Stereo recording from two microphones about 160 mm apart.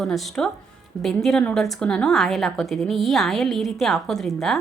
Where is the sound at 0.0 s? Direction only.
Centre (ahead or behind).